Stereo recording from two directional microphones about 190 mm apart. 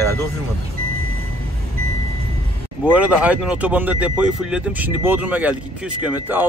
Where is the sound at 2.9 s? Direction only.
5° right (ahead or behind).